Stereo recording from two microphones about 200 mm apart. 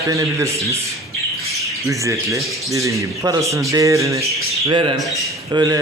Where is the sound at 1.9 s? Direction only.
15° right (ahead or behind).